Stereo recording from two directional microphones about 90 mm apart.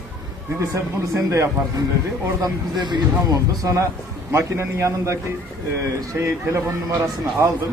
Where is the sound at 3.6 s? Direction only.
35° right (ahead or behind).